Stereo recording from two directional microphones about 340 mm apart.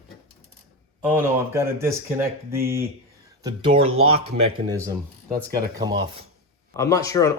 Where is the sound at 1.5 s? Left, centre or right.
Centre.